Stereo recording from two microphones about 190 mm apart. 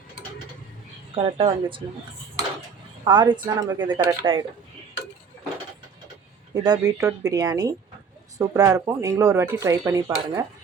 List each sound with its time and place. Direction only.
1.1 s speech: 25° right (ahead or behind)
3.0 s speech: 25° right (ahead or behind)
6.5 s speech: 20° right (ahead or behind)